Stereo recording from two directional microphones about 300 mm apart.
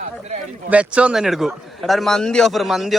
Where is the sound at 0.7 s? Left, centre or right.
Centre.